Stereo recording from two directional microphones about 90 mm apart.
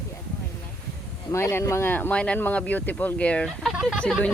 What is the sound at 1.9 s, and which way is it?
Speech, 15° left (ahead or behind).